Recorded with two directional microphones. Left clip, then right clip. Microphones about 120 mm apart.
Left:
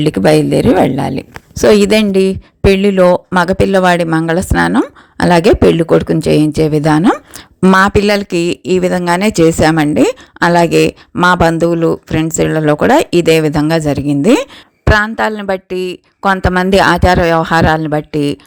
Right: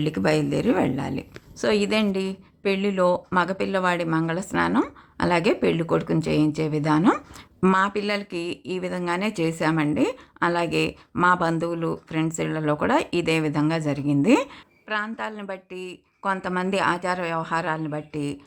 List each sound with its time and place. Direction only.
0.0 s speech: 45° left (ahead or behind)
1.5 s speech: 65° left (ahead or behind)
7.6 s speech: 40° left (ahead or behind)
7.9 s speech: 70° left (ahead or behind); by 14.4 s 45° left (ahead or behind)
14.8 s speech: 70° left (ahead or behind)